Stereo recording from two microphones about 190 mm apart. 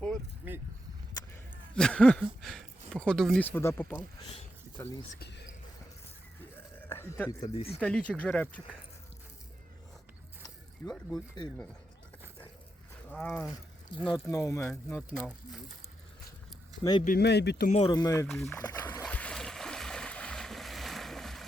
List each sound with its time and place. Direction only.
1.7 s a sound: 5° left (ahead or behind)
2.9 s speech: 5° left (ahead or behind)
5.2 s a sound: 60° left (ahead or behind)
6.8 s a sound: 10° left (ahead or behind)
7.4 s speech: 30° left (ahead or behind)
7.7 s speech: 5° left (ahead or behind)
10.4 s speech: 20° left (ahead or behind)
13.1 s speech: 5° left (ahead or behind)
13.5 s speech: 25° left (ahead or behind); by 15.0 s 5° left (ahead or behind)
17.0 s speech: 50° left (ahead or behind)
17.7 s speech: 35° left (ahead or behind)
17.9 s speech: 20° left (ahead or behind)
18.7 s boat: 15° left (ahead or behind)